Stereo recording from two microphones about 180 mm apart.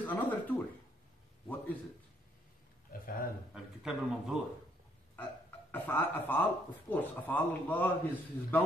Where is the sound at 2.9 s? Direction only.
50° left (ahead or behind).